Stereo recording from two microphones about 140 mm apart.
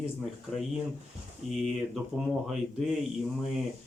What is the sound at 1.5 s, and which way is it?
Speech, centre (ahead or behind).